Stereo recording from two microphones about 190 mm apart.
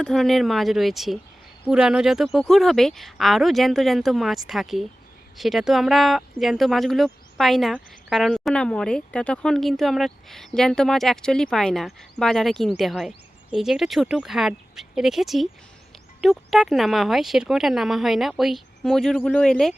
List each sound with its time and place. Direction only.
0.0 s speech: centre (ahead or behind)